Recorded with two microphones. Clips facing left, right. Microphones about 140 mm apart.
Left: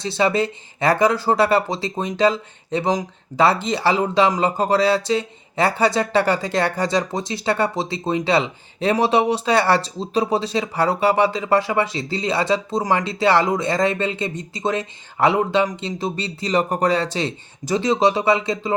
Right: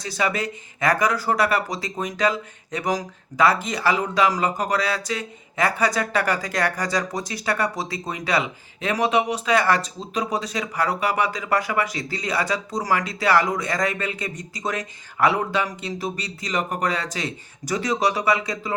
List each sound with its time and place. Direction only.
0.0 s speech: 25° left (ahead or behind)